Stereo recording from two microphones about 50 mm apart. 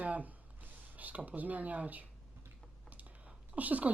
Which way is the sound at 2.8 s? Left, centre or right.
Right.